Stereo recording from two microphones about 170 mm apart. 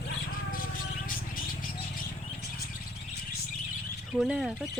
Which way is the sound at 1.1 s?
55° left (ahead or behind).